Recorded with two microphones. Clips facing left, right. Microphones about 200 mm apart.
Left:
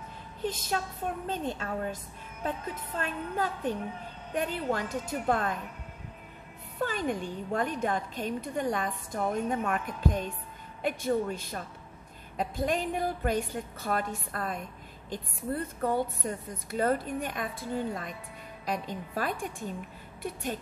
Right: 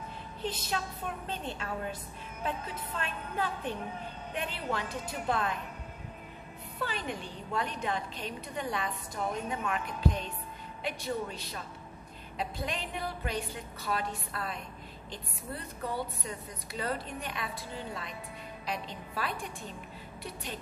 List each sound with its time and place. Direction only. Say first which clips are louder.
0.4 s a woman's voice: left 3 dB; 45° left (ahead or behind)
6.8 s a woman's voice: left 6 dB; 45° left (ahead or behind)